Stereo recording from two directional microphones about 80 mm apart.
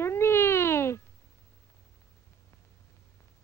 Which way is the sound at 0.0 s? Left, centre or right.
Left.